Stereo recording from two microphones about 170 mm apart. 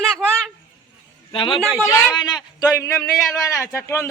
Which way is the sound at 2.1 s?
25° left (ahead or behind).